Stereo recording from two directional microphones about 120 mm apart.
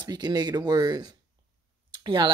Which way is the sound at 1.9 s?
40° right (ahead or behind).